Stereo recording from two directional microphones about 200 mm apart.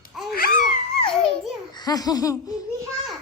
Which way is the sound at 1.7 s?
20° left (ahead or behind).